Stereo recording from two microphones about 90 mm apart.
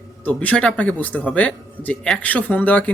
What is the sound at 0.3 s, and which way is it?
A man's voice, 15° left (ahead or behind).